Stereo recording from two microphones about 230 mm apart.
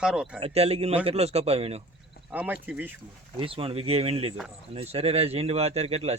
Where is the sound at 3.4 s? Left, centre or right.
Right.